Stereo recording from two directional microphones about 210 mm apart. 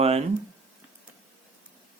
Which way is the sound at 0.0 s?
30° right (ahead or behind).